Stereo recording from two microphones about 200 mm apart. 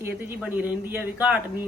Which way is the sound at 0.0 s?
10° right (ahead or behind).